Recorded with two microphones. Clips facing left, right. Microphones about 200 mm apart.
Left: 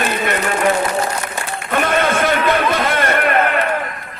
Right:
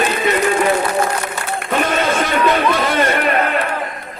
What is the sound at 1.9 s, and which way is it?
Speech, 55° left (ahead or behind).